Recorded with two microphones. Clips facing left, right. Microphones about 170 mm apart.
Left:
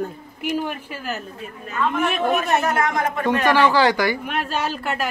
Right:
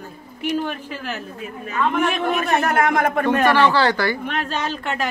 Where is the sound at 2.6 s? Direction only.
60° right (ahead or behind).